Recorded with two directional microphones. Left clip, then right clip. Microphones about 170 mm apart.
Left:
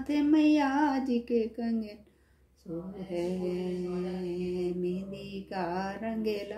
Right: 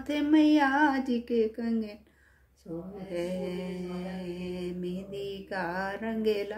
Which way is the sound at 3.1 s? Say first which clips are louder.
Left 1 dB; 20° right (ahead or behind).